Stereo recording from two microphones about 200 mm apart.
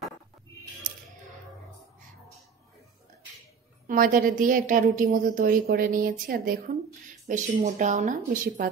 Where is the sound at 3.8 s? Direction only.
45° right (ahead or behind).